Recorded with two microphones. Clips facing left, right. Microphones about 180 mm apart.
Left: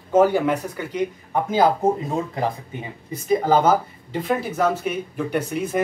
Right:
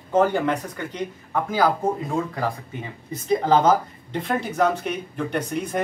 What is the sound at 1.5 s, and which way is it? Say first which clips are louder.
Speech: left 3 dB; 25° left (ahead or behind).